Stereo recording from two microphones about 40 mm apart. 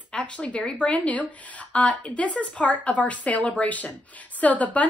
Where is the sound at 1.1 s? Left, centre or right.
Left.